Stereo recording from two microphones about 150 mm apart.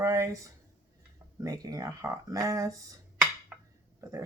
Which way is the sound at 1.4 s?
25° right (ahead or behind).